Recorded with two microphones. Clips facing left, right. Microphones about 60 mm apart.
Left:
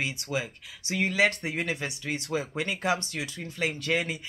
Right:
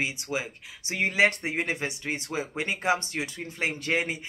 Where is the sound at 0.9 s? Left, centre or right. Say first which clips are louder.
Right 1 dB; right.